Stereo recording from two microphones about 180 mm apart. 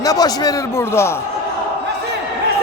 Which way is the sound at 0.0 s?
20° left (ahead or behind).